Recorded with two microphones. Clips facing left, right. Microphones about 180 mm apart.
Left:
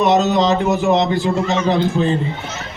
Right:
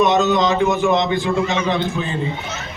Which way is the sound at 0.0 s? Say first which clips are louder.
Left 1 dB; 35° left (ahead or behind).